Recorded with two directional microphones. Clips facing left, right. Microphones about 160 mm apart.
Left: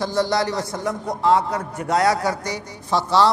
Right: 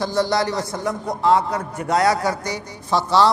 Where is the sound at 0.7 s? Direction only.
30° right (ahead or behind).